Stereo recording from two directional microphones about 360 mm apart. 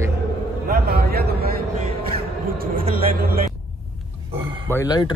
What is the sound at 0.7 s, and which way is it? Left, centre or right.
Speech, right.